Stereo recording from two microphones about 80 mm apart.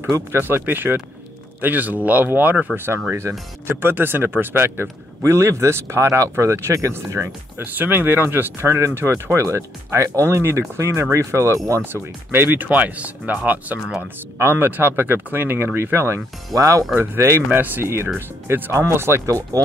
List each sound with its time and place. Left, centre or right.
0.1 s speech: right
11.8 s speech: right
16.9 s speech: right